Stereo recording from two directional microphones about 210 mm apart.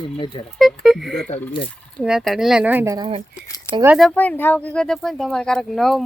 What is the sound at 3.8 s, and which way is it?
Speech, 5° right (ahead or behind).